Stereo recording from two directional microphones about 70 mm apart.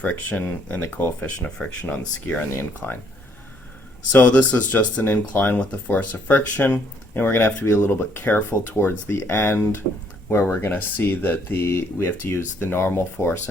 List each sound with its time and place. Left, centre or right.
0.0 s speech: left
1.5 s speech: centre
4.1 s speech: left
9.3 s speech: left